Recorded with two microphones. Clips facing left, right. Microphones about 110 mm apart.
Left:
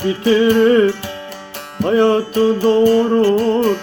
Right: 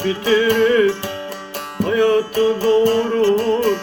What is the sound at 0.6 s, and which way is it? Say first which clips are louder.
Music: left 3 dB; 50° left (ahead or behind).